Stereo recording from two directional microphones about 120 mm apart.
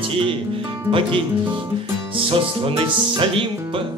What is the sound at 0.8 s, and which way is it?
Speech, 45° right (ahead or behind).